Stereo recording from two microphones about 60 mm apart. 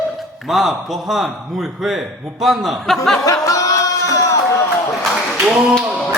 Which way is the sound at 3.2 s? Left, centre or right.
Left.